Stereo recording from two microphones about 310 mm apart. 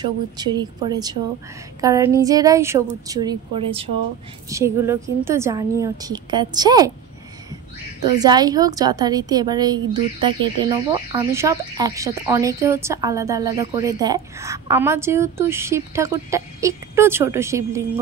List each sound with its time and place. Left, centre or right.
0.0 s speech: centre
8.0 s speech: centre